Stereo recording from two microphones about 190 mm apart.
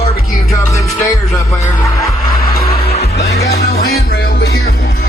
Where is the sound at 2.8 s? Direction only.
35° left (ahead or behind).